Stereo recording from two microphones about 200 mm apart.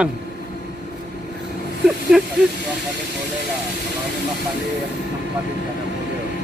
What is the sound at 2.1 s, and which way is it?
Speech, centre (ahead or behind).